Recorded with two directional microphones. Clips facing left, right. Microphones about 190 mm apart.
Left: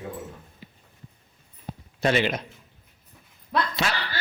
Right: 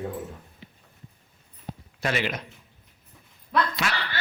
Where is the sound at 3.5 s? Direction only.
25° left (ahead or behind).